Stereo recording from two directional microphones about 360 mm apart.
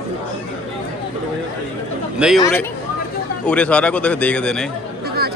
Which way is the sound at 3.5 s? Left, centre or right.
Centre.